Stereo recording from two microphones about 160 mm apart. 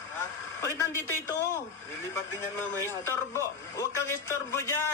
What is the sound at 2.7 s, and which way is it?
Speech, 15° left (ahead or behind).